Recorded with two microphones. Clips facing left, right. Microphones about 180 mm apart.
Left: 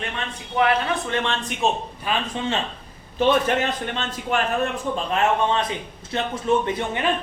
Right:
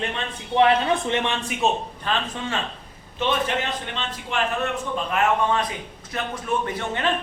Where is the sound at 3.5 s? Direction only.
45° left (ahead or behind).